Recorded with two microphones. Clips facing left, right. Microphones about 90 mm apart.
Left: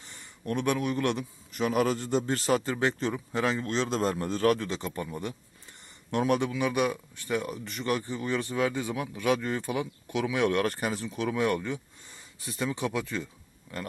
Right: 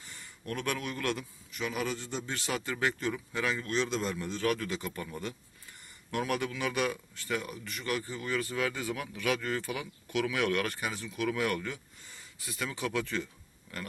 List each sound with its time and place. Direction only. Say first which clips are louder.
0.0 s speech: left 5 dB; 25° left (ahead or behind)
1.5 s a man's voice: left 8 dB; 45° left (ahead or behind)
4.5 s speech: left 3 dB; 30° left (ahead or behind)